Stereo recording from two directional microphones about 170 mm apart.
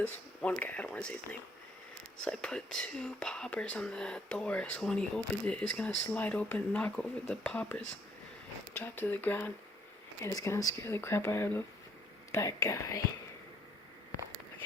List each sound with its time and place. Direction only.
0.4 s speech: 10° left (ahead or behind)